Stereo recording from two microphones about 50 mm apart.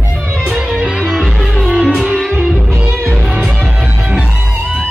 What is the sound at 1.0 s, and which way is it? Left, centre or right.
Music, centre.